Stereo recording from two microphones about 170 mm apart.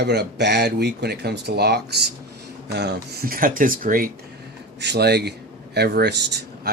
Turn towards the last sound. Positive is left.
turn(degrees=-85)